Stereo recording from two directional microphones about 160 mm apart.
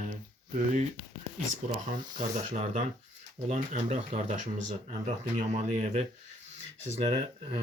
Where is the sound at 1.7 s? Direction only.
55° right (ahead or behind).